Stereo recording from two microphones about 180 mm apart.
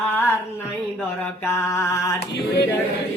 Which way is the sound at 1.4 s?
15° left (ahead or behind).